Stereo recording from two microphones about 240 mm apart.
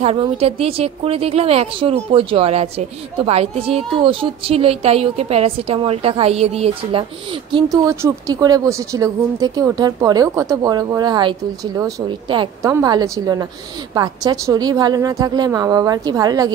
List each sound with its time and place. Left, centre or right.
0.0 s a woman's voice: right